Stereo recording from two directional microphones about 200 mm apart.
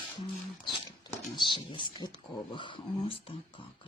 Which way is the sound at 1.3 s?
20° left (ahead or behind).